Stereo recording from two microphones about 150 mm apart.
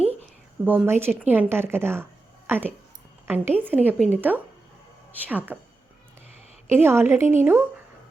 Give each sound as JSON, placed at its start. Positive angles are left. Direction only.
{"t": 0.6, "sound": "a woman's voice", "side_deg": -10}
{"t": 6.7, "sound": "a woman's voice", "side_deg": -15}